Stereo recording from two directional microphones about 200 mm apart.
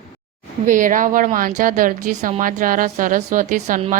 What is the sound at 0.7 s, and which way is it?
A woman's voice, 40° right (ahead or behind).